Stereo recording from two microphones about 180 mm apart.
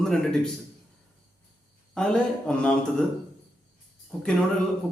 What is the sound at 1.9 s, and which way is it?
A man's voice, 5° left (ahead or behind).